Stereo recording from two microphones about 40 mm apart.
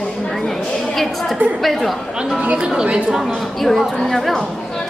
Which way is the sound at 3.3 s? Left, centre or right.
Centre.